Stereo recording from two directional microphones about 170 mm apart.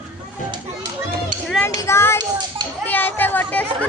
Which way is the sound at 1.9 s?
15° left (ahead or behind).